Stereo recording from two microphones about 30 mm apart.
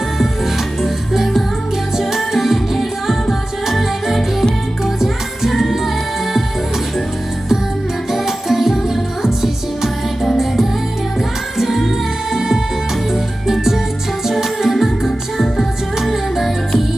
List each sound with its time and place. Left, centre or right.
0.8 s music: centre
8.1 s music: centre
12.3 s music: centre
14.6 s music: centre